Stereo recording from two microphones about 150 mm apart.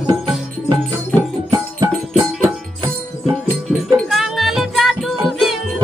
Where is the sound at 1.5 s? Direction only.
25° right (ahead or behind).